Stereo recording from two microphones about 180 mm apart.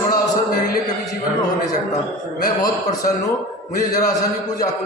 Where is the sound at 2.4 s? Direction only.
20° left (ahead or behind).